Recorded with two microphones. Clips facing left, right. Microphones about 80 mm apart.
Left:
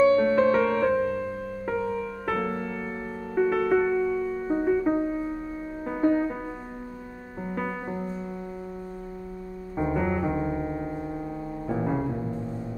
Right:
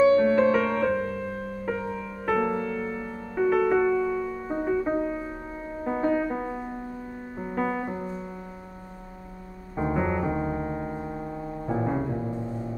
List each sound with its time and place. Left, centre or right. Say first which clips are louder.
0.0 s music: right 1 dB; centre
2.6 s music: right 2 dB; centre
3.3 s music: right 1 dB; centre
7.4 s music: right 3 dB; centre
9.8 s piano: even; centre